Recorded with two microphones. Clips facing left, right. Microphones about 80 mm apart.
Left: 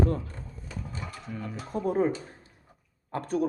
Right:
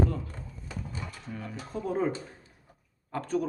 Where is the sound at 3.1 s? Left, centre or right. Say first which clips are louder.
Left 2 dB; left.